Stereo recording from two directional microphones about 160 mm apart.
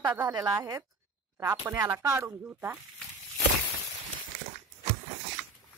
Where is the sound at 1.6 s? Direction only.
10° right (ahead or behind).